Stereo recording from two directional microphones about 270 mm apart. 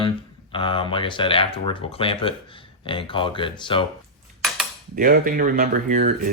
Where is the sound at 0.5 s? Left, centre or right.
Centre.